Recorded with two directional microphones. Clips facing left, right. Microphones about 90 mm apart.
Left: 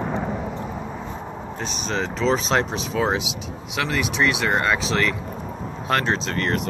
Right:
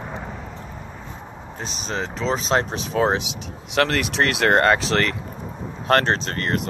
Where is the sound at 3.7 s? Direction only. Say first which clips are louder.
Right 3 dB; 75° right (ahead or behind); by 6.3 s 50° right (ahead or behind).